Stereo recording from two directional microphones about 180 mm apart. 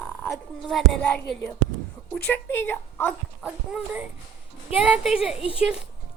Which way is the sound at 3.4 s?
5° right (ahead or behind).